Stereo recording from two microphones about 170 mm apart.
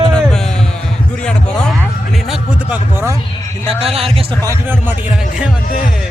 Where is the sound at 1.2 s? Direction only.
5° left (ahead or behind).